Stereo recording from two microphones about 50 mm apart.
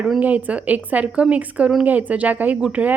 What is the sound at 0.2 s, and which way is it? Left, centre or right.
A woman's voice, right.